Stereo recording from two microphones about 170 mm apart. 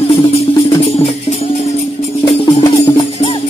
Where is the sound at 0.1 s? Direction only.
35° left (ahead or behind).